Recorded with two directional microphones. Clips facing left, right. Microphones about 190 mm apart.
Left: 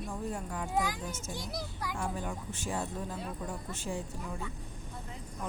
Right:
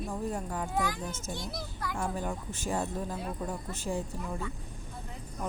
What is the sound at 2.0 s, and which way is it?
Speech, 40° right (ahead or behind).